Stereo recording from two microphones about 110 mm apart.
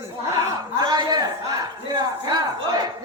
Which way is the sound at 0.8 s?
35° right (ahead or behind).